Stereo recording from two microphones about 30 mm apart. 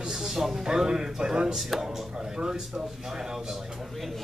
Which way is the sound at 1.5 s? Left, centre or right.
Centre.